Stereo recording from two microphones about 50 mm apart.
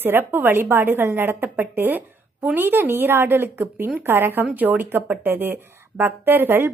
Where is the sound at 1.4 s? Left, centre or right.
Right.